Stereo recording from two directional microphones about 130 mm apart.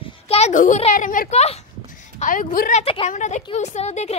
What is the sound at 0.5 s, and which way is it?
Speech, 80° left.